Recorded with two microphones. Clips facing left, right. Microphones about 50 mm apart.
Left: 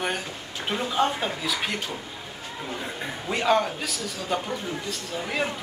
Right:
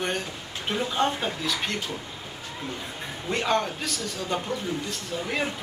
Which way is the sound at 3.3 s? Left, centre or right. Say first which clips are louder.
Left 3 dB; centre.